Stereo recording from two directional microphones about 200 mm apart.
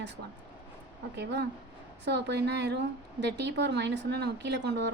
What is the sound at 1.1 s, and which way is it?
A woman's voice, 55° right (ahead or behind).